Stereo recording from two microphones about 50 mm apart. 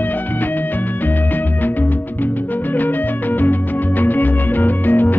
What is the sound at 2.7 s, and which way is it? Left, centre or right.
Music, left.